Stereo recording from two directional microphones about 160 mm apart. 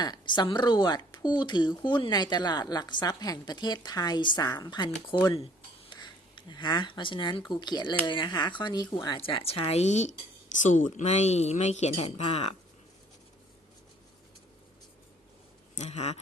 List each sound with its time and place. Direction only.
0.0 s speech: 25° left (ahead or behind)
15.7 s speech: 45° left (ahead or behind)